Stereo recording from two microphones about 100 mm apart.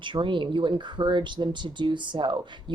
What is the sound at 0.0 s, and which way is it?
Speech, 55° right (ahead or behind).